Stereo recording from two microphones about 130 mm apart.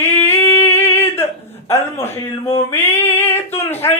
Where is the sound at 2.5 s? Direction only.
20° left (ahead or behind).